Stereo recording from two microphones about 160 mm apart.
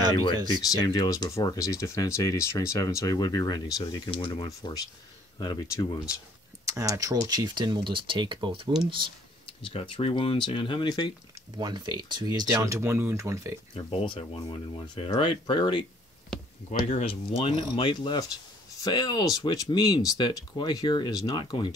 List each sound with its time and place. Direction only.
0.6 s speech: 25° left (ahead or behind)
6.6 s speech: 20° right (ahead or behind)
9.6 s speech: 35° left (ahead or behind)
11.5 s speech: 25° right (ahead or behind)
13.7 s speech: 35° left (ahead or behind)